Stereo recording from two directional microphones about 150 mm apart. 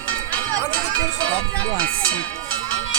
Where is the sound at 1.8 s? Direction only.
10° left (ahead or behind).